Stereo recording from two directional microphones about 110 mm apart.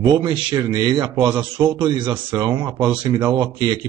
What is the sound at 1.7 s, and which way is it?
Speech, 45° right (ahead or behind).